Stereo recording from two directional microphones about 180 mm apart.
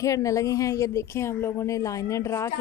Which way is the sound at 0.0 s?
15° left (ahead or behind).